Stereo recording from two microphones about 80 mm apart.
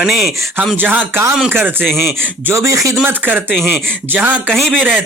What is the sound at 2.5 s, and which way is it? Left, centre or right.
Speech, right.